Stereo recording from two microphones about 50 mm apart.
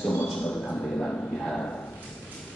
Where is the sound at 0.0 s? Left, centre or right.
Left.